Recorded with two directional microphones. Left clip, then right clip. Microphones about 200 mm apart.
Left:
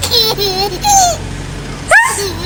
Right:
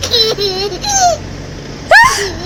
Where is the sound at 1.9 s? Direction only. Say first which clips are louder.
Right 3 dB; 35° right (ahead or behind).